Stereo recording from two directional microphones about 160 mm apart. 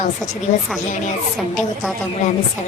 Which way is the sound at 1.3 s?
Centre (ahead or behind).